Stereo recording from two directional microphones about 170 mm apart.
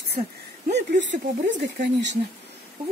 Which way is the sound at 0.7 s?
85° right.